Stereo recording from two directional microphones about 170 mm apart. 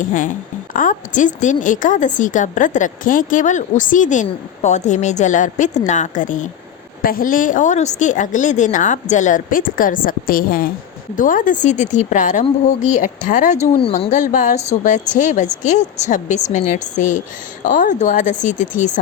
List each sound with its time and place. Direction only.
0.0 s a woman's voice: 50° left (ahead or behind)